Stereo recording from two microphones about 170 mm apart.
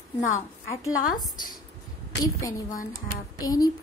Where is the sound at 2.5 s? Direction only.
50° left (ahead or behind).